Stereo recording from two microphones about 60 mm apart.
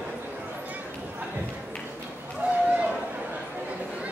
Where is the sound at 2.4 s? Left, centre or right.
Right.